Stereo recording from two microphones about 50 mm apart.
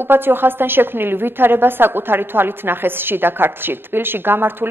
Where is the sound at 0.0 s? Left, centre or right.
Right.